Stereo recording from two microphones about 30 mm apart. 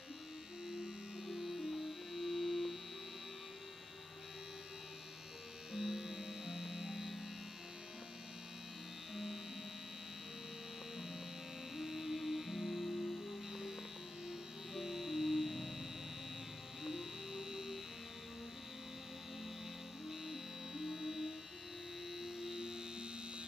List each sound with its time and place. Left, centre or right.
0.7 s hum: right
1.2 s music: centre
5.7 s music: centre
9.1 s mains hum: centre
11.7 s music: centre
20.1 s music: centre
22.2 s mains hum: centre